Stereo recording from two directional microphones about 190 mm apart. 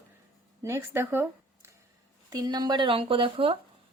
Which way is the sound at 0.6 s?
15° right (ahead or behind).